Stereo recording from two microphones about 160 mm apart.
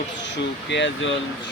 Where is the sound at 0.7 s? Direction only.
90° left.